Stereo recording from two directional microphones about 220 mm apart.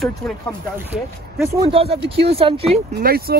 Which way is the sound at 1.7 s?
25° right (ahead or behind).